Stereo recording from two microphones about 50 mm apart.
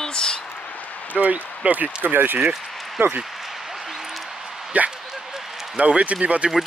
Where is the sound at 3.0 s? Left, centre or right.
Right.